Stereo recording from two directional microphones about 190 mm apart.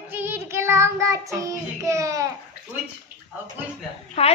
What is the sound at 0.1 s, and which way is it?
Child singing, 10° right (ahead or behind).